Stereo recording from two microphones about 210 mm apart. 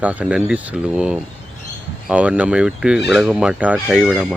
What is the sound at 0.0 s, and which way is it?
Speech, 5° right (ahead or behind).